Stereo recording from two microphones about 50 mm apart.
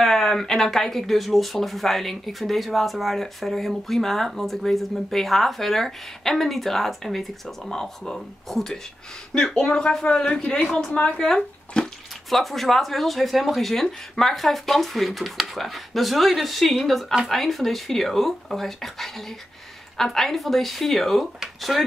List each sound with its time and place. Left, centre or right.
0.0 s a woman's voice: centre; by 11.1 s left
11.1 s speech: centre